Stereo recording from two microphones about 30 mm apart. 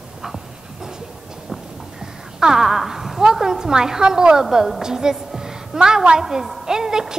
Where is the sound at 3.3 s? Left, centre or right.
Centre.